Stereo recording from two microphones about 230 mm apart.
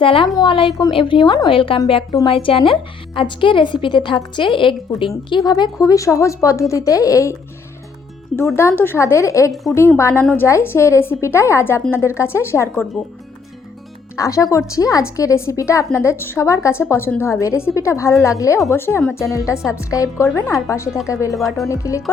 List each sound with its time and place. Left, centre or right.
0.0 s a woman's voice: left
8.4 s a woman's voice: centre
14.2 s a woman's voice: centre
21.3 s speech: centre
21.7 s a woman's voice: centre